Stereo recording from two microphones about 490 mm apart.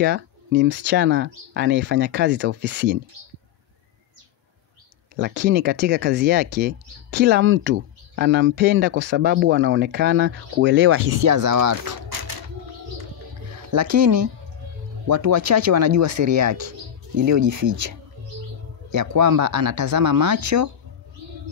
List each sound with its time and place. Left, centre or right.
0.0 s speech: centre
5.1 s speech: centre; by 12.0 s right
13.7 s speech: right